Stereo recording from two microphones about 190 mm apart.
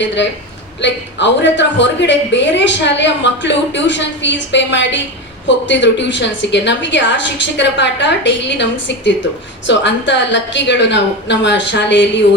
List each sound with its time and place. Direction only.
0.0 s a woman's voice: 70° left (ahead or behind)